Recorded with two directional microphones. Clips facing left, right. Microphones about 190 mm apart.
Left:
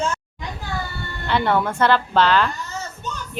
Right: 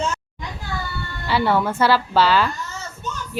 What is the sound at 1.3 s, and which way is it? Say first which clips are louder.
A woman's voice: right 1 dB; 5° right (ahead or behind).